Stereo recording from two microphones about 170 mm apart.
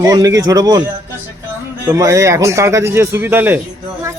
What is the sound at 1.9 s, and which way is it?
Speech, 20° right (ahead or behind).